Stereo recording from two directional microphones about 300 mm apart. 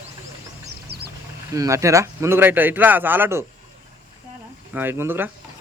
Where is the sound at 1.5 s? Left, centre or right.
Centre.